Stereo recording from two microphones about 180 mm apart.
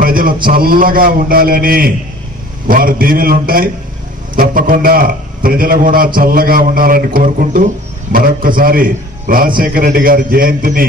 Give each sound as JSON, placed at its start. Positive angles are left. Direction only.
{"t": 0.0, "sound": "a man's voice", "side_deg": -55}